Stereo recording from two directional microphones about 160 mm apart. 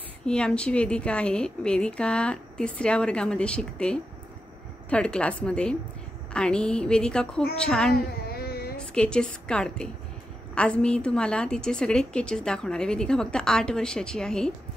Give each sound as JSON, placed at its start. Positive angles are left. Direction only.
{"t": 0.3, "sound": "a woman's voice", "side_deg": 5}
{"t": 7.9, "sound": "a sound", "side_deg": 75}
{"t": 8.7, "sound": "a woman's voice", "side_deg": 5}